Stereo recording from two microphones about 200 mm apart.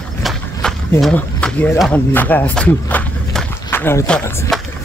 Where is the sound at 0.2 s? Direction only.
Centre (ahead or behind).